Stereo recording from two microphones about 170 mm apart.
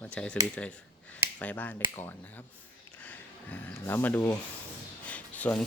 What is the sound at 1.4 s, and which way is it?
Speech, 10° left (ahead or behind).